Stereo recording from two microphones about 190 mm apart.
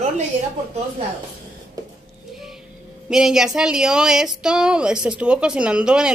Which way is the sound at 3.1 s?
Centre (ahead or behind).